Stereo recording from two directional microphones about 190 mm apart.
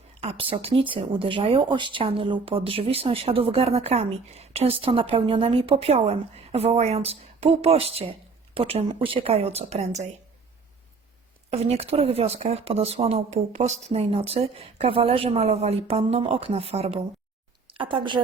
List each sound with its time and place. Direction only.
0.2 s speech: 30° right (ahead or behind)
11.5 s a woman's voice: 30° right (ahead or behind)